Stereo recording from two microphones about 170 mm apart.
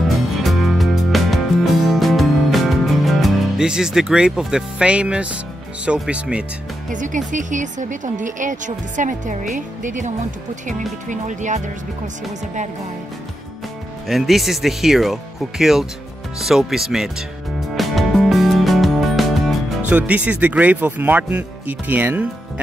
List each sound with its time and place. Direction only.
0.4 s music: centre (ahead or behind)
5.9 s speech: 5° right (ahead or behind)
6.9 s speech: 50° right (ahead or behind)
14.0 s speech: centre (ahead or behind)
17.7 s music: centre (ahead or behind)
19.9 s speech: 10° right (ahead or behind)